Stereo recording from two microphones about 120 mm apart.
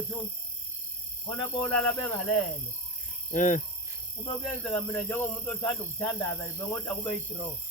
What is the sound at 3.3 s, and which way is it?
Speech, 90° left.